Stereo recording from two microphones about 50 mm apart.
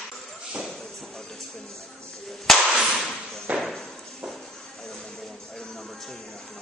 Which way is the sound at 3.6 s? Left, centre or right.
Centre.